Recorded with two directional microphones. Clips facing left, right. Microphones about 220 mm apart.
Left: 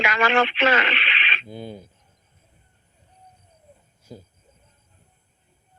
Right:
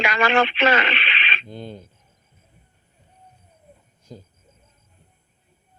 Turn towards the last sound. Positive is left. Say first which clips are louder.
# even
turn(degrees=10)  # may be behind; listen again after turning